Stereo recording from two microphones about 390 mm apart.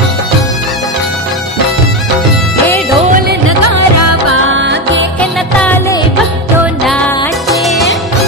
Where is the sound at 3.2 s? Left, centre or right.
Right.